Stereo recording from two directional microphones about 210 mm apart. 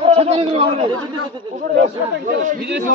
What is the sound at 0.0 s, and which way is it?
Speech, 30° right (ahead or behind).